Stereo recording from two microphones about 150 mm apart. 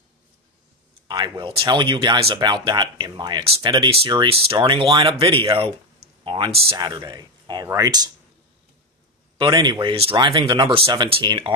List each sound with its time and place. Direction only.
1.0 s speech: 30° right (ahead or behind)
6.8 s speech: 30° right (ahead or behind)
9.4 s speech: 30° right (ahead or behind)